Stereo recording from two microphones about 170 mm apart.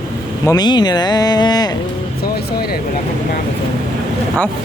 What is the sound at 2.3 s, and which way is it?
Speech, 65° left (ahead or behind).